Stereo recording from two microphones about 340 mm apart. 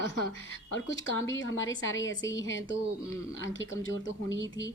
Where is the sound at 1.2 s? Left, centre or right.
Left.